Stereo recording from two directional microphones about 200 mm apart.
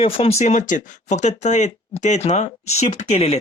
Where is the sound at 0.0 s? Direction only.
30° left (ahead or behind).